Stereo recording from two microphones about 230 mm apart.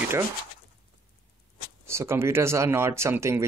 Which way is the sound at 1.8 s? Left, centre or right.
Centre.